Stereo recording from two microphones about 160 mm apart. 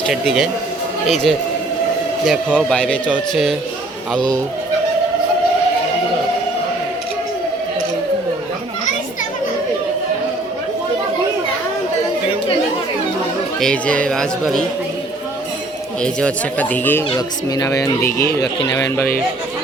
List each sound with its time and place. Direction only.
0.1 s speech: centre (ahead or behind)
4.2 s speech: 25° right (ahead or behind)
13.6 s speech: 5° left (ahead or behind)
16.0 s speech: 5° left (ahead or behind)
17.2 s speech: 25° left (ahead or behind)